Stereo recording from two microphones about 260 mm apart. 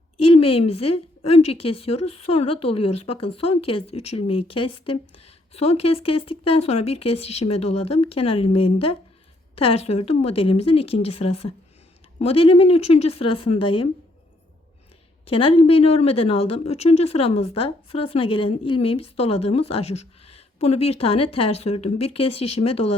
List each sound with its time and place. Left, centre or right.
0.3 s speech: left
15.3 s speech: left